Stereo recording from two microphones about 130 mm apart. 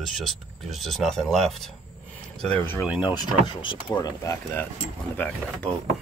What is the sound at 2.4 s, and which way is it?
Speech, 10° left (ahead or behind).